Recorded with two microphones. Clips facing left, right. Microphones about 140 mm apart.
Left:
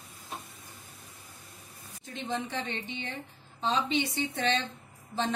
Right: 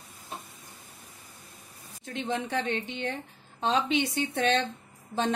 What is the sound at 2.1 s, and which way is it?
Speech, 65° right (ahead or behind).